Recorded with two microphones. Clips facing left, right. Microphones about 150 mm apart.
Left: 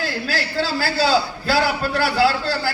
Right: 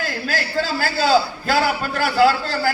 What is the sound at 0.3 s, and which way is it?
Speech, 50° right (ahead or behind).